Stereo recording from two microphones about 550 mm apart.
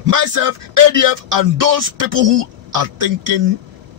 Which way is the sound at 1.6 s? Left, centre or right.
Right.